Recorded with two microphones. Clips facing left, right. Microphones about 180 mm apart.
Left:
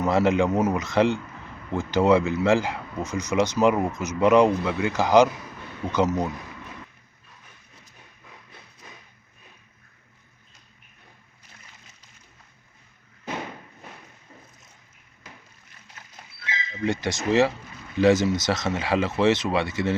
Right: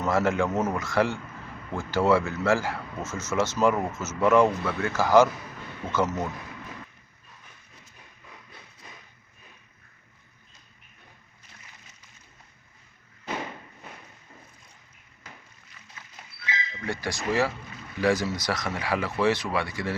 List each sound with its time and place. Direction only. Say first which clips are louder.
0.0 s speech: left 4 dB; 15° left (ahead or behind)
16.8 s speech: left 6 dB; 20° left (ahead or behind)